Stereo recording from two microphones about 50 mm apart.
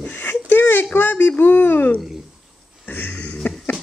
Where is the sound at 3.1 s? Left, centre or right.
Left.